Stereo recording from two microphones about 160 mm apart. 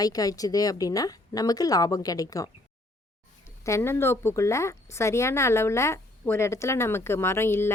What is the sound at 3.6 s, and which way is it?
A woman's voice, 20° left (ahead or behind).